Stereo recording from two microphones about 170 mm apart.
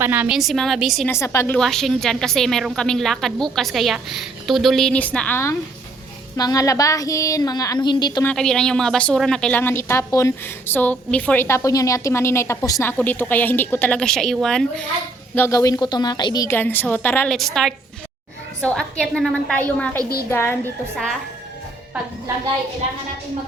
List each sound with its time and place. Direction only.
0.0 s a woman's voice: 10° right (ahead or behind)
1.0 s a woman's voice: 15° left (ahead or behind)
1.5 s a woman's voice: centre (ahead or behind); by 8.2 s 25° left (ahead or behind)
8.2 s a woman's voice: 5° left (ahead or behind)
15.4 s a woman's voice: 15° left (ahead or behind)